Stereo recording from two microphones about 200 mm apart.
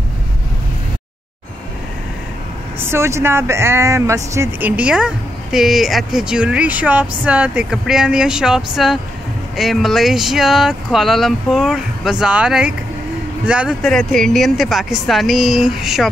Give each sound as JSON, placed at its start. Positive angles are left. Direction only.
{"t": 2.8, "sound": "speech", "side_deg": -15}